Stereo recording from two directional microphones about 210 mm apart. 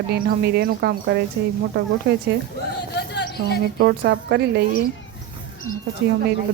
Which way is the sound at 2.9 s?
55° left (ahead or behind).